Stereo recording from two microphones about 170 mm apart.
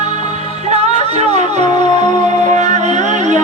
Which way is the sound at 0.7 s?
40° right (ahead or behind).